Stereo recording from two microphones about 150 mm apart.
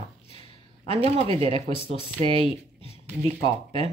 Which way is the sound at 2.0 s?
35° left (ahead or behind).